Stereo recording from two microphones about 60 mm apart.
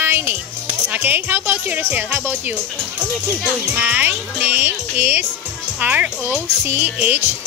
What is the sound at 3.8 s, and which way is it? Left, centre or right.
Music, right.